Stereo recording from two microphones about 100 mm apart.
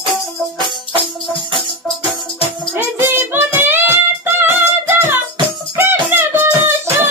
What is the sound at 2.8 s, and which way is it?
Music, 20° right (ahead or behind).